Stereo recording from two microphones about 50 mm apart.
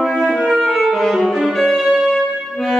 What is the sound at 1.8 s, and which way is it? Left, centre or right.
Music, centre.